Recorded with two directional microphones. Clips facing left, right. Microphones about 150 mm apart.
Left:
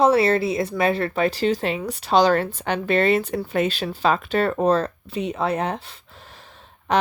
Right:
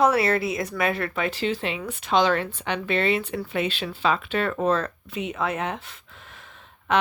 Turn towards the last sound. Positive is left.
turn(degrees=35)  # may be behind; listen again after turning